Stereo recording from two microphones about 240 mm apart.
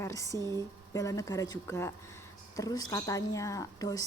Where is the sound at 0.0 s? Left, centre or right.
Centre.